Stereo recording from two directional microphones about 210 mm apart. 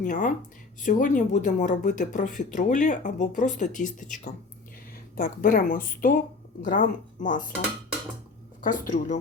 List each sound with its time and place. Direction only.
0.0 s speech: 40° left (ahead or behind)
8.6 s speech: 35° left (ahead or behind)